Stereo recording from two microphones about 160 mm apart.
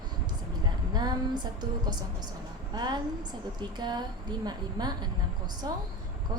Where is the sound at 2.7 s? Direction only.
25° right (ahead or behind).